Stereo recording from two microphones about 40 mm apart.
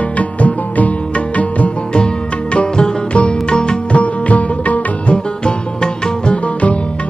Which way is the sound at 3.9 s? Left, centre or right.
Left.